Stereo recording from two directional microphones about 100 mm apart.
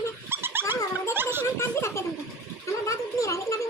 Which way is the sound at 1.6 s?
25° left (ahead or behind).